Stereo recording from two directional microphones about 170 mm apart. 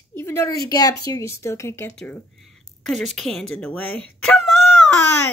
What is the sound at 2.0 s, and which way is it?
A woman's voice, 5° left (ahead or behind).